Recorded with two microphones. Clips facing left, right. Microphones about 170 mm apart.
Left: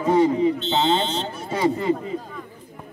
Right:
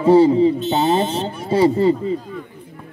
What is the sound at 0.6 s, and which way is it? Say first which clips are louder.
Speech: right 4 dB; 30° left (ahead or behind).